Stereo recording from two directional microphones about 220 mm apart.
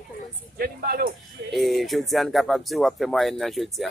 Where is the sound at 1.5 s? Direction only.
Centre (ahead or behind).